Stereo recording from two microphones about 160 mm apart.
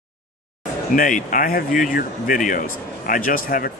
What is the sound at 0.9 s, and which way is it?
Speech, 55° left (ahead or behind).